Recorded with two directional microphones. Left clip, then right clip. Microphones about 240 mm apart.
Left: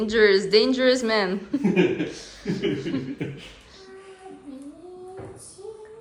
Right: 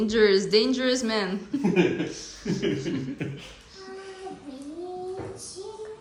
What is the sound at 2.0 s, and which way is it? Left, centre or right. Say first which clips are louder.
Speech: left 1 dB; centre.